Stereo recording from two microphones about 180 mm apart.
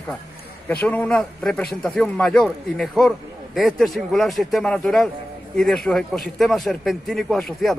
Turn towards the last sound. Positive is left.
turn(degrees=0)  # may be behind; listen again after turning